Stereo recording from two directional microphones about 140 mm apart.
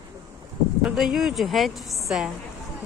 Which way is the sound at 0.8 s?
5° right (ahead or behind).